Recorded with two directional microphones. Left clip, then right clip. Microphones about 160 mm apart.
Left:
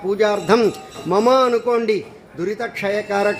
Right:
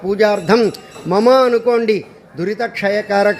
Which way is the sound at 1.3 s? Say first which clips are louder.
Right 5 dB; 10° right (ahead or behind).